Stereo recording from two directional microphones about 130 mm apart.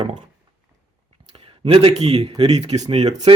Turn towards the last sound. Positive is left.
turn(degrees=-55)  # may be behind; listen again after turning